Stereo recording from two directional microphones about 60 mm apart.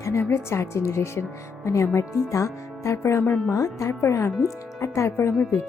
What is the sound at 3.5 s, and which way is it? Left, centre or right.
A woman's voice, left.